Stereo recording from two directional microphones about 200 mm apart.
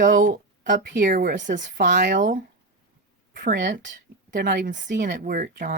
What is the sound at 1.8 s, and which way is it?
Speech, 55° right (ahead or behind).